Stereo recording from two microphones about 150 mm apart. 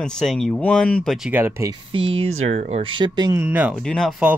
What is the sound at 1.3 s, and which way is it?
Speech, 15° right (ahead or behind).